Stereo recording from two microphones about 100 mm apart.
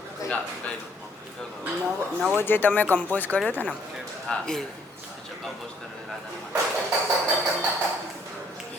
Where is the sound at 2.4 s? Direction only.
20° left (ahead or behind).